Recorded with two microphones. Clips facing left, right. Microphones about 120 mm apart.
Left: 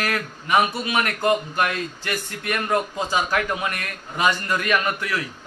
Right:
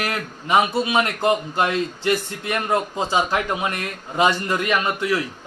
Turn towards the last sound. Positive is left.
turn(degrees=-25)  # may be behind; listen again after turning